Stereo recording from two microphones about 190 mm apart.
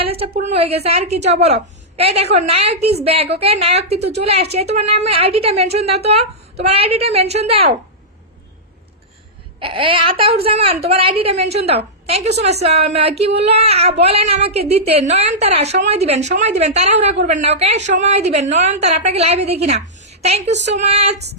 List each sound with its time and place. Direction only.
0.0 s a sound: 30° right (ahead or behind)
0.3 s a woman's voice: 35° right (ahead or behind)
9.6 s a woman's voice: 25° right (ahead or behind)